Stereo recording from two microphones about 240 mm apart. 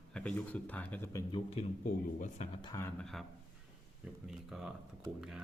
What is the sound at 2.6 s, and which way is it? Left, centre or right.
Speech, centre.